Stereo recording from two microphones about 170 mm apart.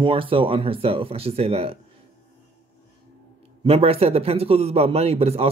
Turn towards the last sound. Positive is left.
turn(degrees=-35)  # may be behind; listen again after turning